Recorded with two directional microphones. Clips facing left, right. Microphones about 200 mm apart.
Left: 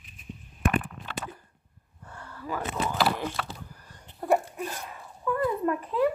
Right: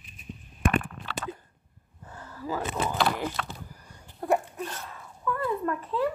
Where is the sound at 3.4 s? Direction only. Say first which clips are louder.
Even; 5° left (ahead or behind).